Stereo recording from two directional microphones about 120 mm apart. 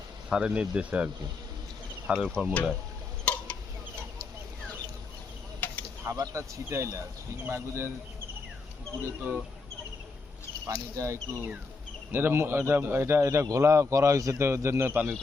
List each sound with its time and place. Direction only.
0.3 s speech: 5° right (ahead or behind)
2.1 s speech: 5° left (ahead or behind)
3.2 s tick-tock: 10° left (ahead or behind)
5.5 s a sound: 15° left (ahead or behind)
6.1 s a man's voice: 25° right (ahead or behind)
10.9 s a man's voice: 25° right (ahead or behind)